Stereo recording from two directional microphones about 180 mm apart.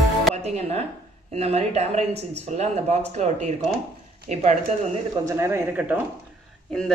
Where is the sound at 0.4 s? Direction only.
35° right (ahead or behind).